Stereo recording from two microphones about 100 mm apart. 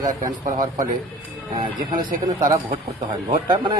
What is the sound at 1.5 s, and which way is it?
Speech, 55° right (ahead or behind).